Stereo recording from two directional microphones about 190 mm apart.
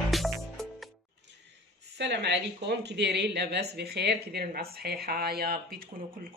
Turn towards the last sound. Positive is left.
turn(degrees=-55)  # may be behind; listen again after turning